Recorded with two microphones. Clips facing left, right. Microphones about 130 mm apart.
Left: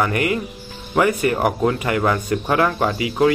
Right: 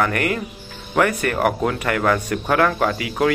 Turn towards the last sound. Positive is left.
turn(degrees=5)  # may be behind; listen again after turning